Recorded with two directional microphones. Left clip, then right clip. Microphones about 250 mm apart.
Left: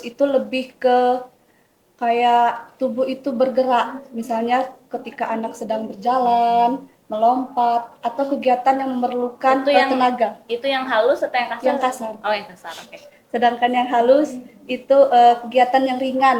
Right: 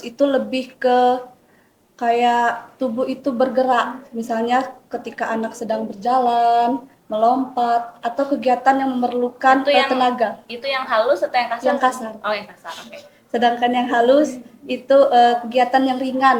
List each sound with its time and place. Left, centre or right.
0.0 s a woman's voice: centre
9.6 s a woman's voice: left
10.0 s a woman's voice: centre
10.5 s a woman's voice: left
11.6 s a woman's voice: centre
12.2 s a woman's voice: left
13.3 s a woman's voice: centre